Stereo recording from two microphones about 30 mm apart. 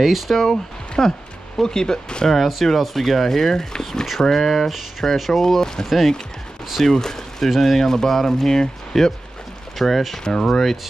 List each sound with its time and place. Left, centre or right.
0.0 s speech: centre
0.4 s speech: centre
2.2 s speech: centre
4.3 s speech: centre
7.4 s speech: centre
7.8 s speech: centre
9.8 s speech: centre
10.2 s speech: left